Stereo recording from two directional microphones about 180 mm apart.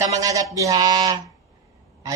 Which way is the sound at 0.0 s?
20° right (ahead or behind).